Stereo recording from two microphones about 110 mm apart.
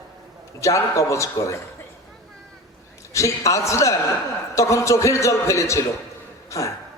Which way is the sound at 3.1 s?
30° left (ahead or behind).